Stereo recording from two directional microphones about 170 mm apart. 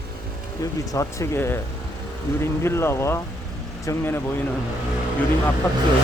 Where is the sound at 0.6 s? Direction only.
20° left (ahead or behind).